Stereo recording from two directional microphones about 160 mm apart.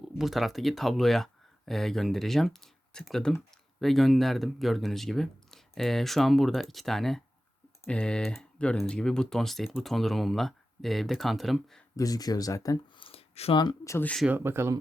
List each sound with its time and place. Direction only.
0.0 s speech: centre (ahead or behind)
11.9 s speech: 25° left (ahead or behind); by 13.6 s 40° left (ahead or behind)
13.6 s speech: 25° left (ahead or behind)
14.3 s speech: 15° right (ahead or behind)